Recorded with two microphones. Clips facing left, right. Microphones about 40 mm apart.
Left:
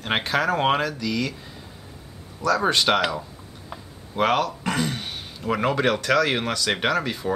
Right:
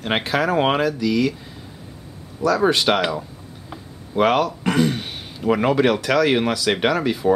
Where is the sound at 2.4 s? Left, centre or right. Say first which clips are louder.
Right 3 dB; centre.